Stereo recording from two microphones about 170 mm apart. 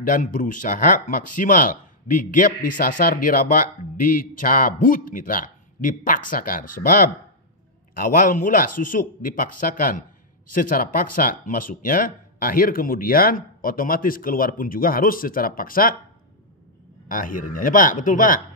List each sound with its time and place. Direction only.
0.0 s speech: 50° left (ahead or behind)
17.1 s speech: 50° left (ahead or behind)